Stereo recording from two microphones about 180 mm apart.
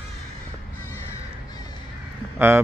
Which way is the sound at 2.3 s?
10° right (ahead or behind).